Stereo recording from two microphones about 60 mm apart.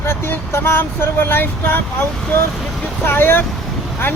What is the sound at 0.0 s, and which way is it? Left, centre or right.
Speech, left.